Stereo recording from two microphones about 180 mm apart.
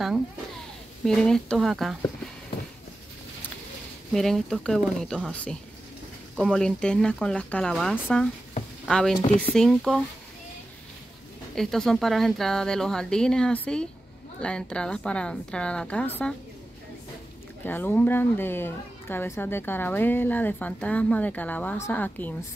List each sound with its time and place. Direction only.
1.0 s speech: 5° left (ahead or behind)
4.1 s speech: centre (ahead or behind)
9.2 s speech: 40° left (ahead or behind)
9.6 s speech: centre (ahead or behind)
11.5 s speech: centre (ahead or behind)
17.6 s a woman's voice: 10° left (ahead or behind)